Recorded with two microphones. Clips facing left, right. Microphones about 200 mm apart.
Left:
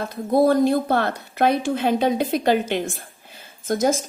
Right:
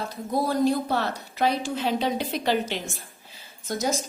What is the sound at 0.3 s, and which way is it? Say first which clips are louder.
A woman's voice: left 6 dB; 55° left (ahead or behind).